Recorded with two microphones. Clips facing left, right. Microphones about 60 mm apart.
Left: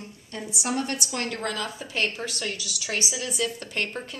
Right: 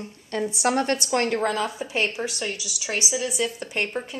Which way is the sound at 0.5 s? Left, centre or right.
Right.